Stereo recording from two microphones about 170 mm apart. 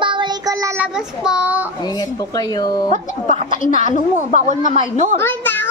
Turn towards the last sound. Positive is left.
turn(degrees=10)  # may be behind; listen again after turning